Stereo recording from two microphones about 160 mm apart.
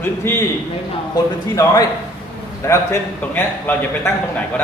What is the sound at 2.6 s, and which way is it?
A man's voice, 15° left (ahead or behind).